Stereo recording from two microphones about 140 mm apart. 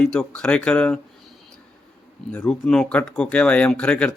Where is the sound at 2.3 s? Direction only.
5° left (ahead or behind).